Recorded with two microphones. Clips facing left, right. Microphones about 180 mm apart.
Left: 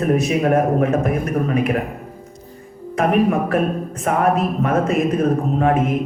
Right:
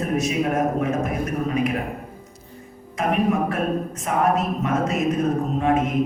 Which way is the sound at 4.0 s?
55° left (ahead or behind).